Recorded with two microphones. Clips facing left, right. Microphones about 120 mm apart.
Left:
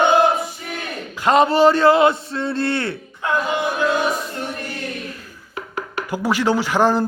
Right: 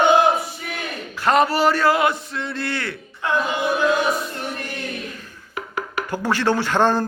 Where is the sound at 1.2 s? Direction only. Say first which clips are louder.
Left 3 dB; 20° left (ahead or behind).